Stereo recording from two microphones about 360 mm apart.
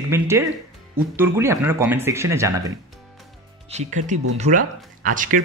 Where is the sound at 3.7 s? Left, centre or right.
Centre.